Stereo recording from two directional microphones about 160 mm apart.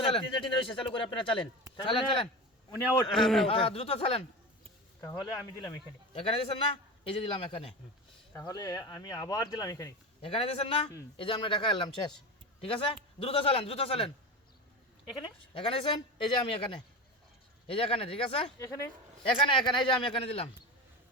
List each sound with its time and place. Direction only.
0.0 s a man's voice: 35° left (ahead or behind)
3.1 s a man's voice: centre (ahead or behind)
3.4 s a man's voice: 35° left (ahead or behind)
4.9 s speech: 20° left (ahead or behind)
6.1 s a man's voice: 35° left (ahead or behind)
8.4 s speech: 20° left (ahead or behind)
10.2 s a man's voice: 35° left (ahead or behind)
15.2 s a man's voice: 30° left (ahead or behind)
18.6 s speech: 20° left (ahead or behind)
19.4 s a man's voice: 30° left (ahead or behind)